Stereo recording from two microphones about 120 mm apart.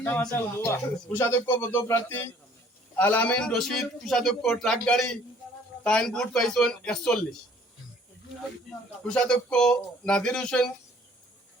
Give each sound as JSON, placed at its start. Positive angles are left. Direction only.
{"t": 0.2, "sound": "a man's voice", "side_deg": 15}
{"t": 9.0, "sound": "speech", "side_deg": 5}